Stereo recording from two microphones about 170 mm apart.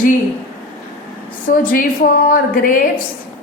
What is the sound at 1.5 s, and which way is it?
A woman's voice, 55° left (ahead or behind).